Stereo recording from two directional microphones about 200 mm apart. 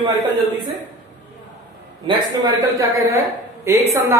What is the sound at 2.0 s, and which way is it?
Speech, 20° right (ahead or behind).